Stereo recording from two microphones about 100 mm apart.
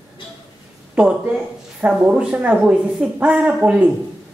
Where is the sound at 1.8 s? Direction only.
10° right (ahead or behind).